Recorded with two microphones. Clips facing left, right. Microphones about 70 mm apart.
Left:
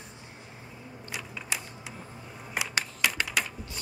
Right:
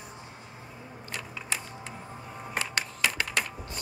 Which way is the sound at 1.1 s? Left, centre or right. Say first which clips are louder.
Even; centre.